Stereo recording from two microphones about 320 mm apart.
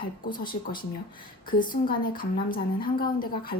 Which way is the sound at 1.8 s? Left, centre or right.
Left.